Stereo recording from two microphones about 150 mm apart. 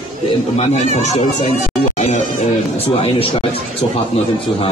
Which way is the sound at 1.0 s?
50° left (ahead or behind).